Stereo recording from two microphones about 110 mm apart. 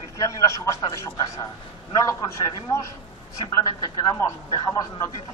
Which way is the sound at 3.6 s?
30° left (ahead or behind).